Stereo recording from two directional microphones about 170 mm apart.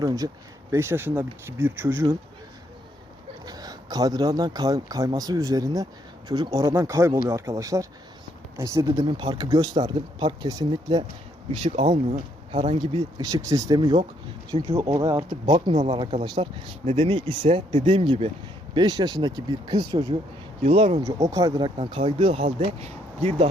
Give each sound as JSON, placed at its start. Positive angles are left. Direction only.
{"t": 0.0, "sound": "speech", "side_deg": -20}
{"t": 3.4, "sound": "speech", "side_deg": -20}
{"t": 12.5, "sound": "speech", "side_deg": -40}
{"t": 12.8, "sound": "speech", "side_deg": -30}
{"t": 20.6, "sound": "speech", "side_deg": -35}
{"t": 21.0, "sound": "speech", "side_deg": -20}
{"t": 21.8, "sound": "speech", "side_deg": -35}